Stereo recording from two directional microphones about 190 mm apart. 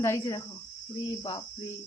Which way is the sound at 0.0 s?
20° left (ahead or behind).